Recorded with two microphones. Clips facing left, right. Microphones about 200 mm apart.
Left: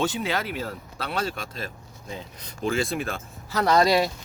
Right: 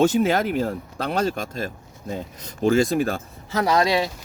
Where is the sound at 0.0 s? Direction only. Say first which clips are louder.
Right 8 dB; 45° right (ahead or behind).